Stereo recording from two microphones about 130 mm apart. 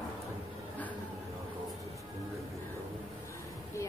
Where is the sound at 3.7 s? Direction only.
25° left (ahead or behind).